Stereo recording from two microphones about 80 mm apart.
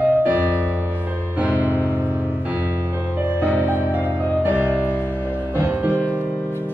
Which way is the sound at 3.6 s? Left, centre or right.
Right.